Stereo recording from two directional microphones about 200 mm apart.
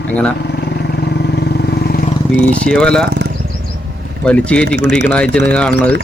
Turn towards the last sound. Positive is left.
turn(degrees=5)  # may be behind; listen again after turning